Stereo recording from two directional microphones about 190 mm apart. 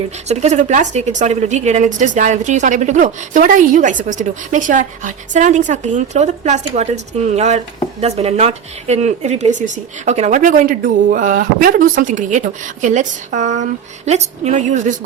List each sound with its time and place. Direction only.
0.3 s speech: 35° right (ahead or behind)